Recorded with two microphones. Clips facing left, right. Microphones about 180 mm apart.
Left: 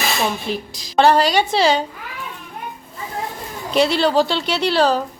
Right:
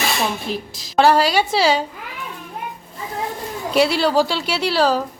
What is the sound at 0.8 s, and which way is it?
A woman's voice, 5° right (ahead or behind).